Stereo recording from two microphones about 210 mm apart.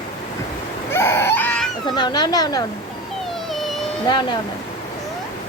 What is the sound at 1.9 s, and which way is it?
Speech, 20° left (ahead or behind).